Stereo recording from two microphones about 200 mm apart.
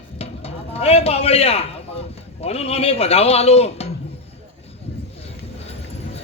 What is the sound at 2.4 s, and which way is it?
A man's voice, 30° left (ahead or behind).